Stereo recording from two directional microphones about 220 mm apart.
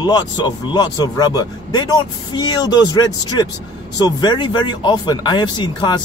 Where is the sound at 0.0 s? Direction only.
20° left (ahead or behind).